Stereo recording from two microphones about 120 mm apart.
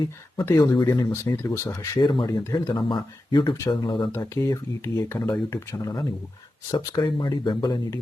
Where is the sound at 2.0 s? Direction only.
40° left (ahead or behind).